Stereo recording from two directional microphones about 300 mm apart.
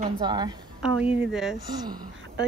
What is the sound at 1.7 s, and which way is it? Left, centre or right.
Speech, centre.